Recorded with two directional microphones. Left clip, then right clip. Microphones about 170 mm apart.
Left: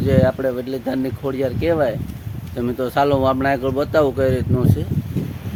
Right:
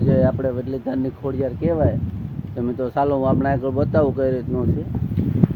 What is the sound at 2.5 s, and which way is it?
Speech, 10° left (ahead or behind).